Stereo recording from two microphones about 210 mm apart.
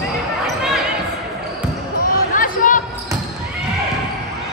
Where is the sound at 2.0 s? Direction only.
40° left (ahead or behind).